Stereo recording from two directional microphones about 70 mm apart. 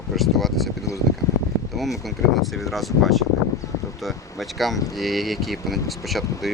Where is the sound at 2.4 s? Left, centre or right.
Centre.